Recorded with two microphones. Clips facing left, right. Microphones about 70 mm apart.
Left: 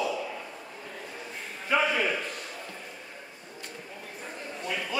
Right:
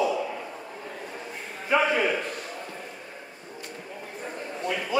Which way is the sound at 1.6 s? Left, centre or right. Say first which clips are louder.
Right 3 dB; centre.